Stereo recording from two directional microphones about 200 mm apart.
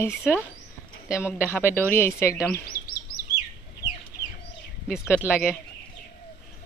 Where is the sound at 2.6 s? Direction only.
50° left (ahead or behind).